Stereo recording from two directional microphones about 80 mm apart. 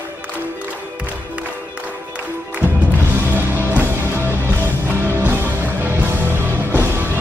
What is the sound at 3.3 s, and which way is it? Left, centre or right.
Music, right.